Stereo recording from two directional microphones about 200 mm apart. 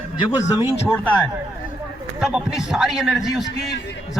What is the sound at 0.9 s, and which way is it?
Speech, 10° left (ahead or behind).